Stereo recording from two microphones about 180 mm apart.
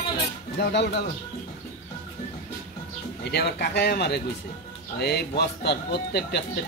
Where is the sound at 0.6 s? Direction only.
65° left (ahead or behind).